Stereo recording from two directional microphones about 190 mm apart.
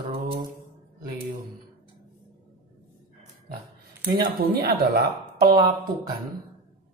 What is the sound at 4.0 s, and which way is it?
Speech, 50° right (ahead or behind).